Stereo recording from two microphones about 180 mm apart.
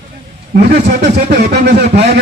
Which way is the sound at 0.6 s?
65° right (ahead or behind).